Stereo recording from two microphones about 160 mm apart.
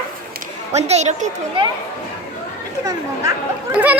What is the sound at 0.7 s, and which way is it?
Speech, 45° right (ahead or behind).